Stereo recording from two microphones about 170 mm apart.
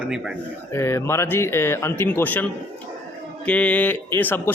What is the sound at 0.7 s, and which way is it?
A man's voice, 15° left (ahead or behind).